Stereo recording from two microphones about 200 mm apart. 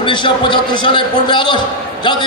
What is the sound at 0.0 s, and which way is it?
A man's voice, 25° left (ahead or behind).